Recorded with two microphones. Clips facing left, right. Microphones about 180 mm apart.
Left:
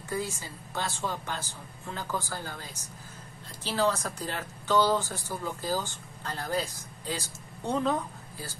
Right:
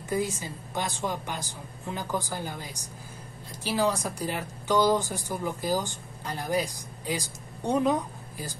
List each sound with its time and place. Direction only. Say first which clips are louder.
0.1 s speech: right 5 dB; 15° right (ahead or behind)